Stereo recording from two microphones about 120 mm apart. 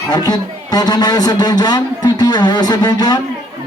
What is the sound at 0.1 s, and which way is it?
Speech, 35° left (ahead or behind).